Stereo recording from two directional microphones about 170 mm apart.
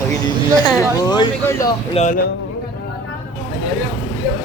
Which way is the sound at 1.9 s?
45° left (ahead or behind).